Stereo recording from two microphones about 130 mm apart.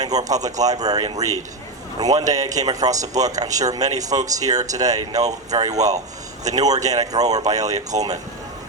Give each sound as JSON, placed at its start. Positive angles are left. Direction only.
{"t": 0.0, "sound": "speech", "side_deg": -30}